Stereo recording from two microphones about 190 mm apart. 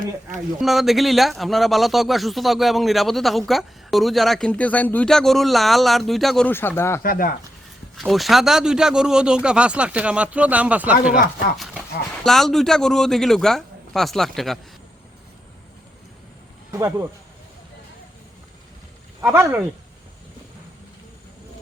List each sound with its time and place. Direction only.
0.6 s speech: centre (ahead or behind)
7.0 s speech: 50° left (ahead or behind)
7.9 s speech: centre (ahead or behind)
16.7 s speech: 15° right (ahead or behind)
19.2 s speech: 10° right (ahead or behind)